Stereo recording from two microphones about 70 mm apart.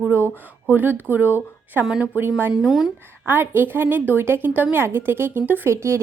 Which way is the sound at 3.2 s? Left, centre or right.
Right.